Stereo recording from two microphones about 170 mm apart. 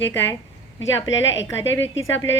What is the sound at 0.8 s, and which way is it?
Speech, 90° left.